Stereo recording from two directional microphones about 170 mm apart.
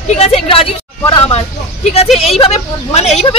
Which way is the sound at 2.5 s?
40° left (ahead or behind).